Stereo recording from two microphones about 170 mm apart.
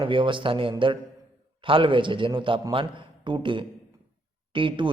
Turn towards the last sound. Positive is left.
turn(degrees=-30)  # may be behind; listen again after turning